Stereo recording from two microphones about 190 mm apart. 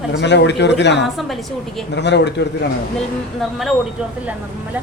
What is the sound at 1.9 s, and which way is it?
Speech, 65° left (ahead or behind).